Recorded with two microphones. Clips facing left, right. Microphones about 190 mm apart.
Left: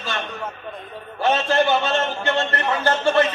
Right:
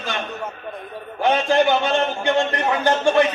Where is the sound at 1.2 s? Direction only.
15° right (ahead or behind).